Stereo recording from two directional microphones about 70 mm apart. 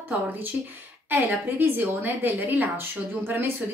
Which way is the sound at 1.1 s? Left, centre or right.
Right.